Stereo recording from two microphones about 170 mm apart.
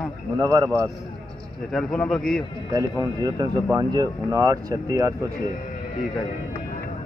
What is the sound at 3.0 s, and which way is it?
Speech, 20° right (ahead or behind).